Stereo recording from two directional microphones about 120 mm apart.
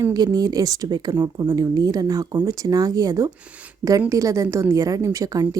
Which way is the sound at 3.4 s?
10° right (ahead or behind).